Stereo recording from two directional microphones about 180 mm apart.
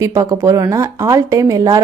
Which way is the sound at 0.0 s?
20° right (ahead or behind).